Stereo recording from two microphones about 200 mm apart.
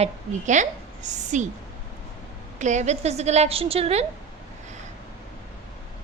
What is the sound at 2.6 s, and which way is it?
A woman's voice, 35° right (ahead or behind).